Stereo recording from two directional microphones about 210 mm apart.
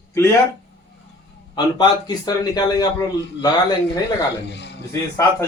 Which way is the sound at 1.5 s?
20° left (ahead or behind).